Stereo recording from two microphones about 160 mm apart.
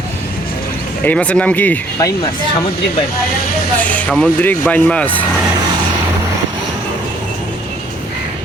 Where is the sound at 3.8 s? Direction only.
10° left (ahead or behind).